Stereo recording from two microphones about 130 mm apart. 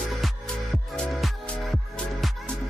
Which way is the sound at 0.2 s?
Centre (ahead or behind).